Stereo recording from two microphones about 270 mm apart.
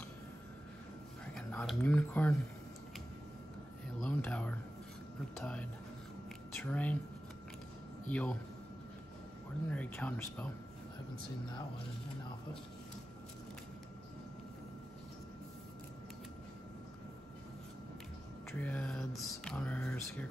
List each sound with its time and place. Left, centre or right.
1.3 s speech: centre
4.0 s a sound: centre
5.4 s speech: centre
8.1 s speech: centre
9.7 s speech: centre
18.5 s speech: centre